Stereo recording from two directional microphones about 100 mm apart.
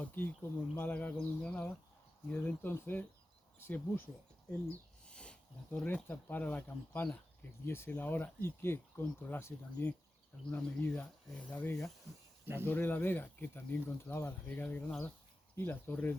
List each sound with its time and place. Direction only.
0.0 s speech: 20° left (ahead or behind)
5.0 s speech: 10° left (ahead or behind)